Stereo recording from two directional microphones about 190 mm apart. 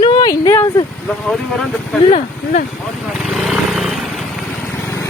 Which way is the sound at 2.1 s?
45° left (ahead or behind).